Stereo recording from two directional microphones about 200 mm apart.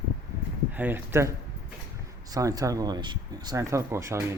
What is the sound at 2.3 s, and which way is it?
Speech, 15° right (ahead or behind).